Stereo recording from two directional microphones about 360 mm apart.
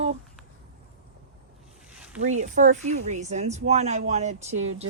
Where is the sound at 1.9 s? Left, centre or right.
Centre.